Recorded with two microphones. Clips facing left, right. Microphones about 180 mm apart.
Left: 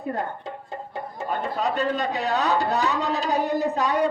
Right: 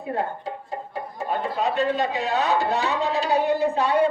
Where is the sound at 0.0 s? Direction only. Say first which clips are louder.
Right 2 dB; 40° left (ahead or behind).